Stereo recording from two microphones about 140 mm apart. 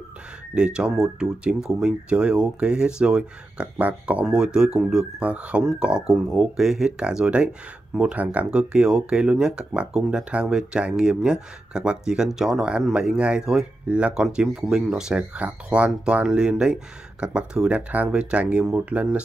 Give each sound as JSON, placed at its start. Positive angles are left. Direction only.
{"t": 0.6, "sound": "speech", "side_deg": -5}